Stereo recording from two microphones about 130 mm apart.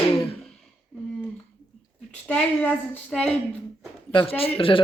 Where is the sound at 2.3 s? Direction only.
10° left (ahead or behind).